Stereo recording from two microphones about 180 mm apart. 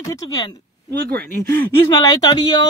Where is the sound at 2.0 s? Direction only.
20° left (ahead or behind).